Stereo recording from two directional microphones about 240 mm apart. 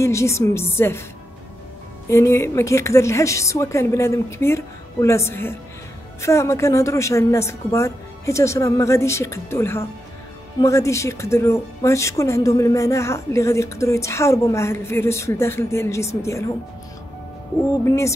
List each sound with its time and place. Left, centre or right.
0.0 s speech: centre
2.0 s speech: centre
17.8 s speech: centre